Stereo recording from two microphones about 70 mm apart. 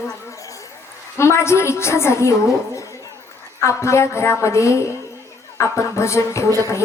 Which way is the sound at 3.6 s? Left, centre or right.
Left.